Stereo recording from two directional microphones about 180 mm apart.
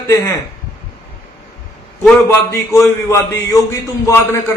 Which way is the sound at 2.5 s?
15° left (ahead or behind).